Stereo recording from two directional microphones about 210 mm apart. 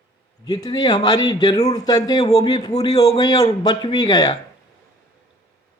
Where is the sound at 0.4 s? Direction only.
20° left (ahead or behind).